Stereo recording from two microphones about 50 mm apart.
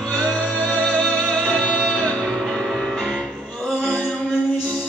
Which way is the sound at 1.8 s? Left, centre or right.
Centre.